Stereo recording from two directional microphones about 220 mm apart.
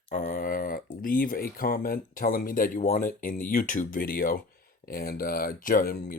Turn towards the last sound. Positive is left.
turn(degrees=40)  # may be behind; listen again after turning